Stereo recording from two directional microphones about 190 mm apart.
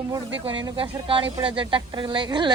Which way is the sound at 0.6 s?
25° right (ahead or behind).